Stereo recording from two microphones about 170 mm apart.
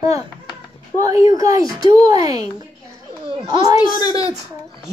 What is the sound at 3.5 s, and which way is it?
Speech, 25° right (ahead or behind).